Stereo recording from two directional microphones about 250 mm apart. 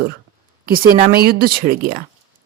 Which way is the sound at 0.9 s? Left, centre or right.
Right.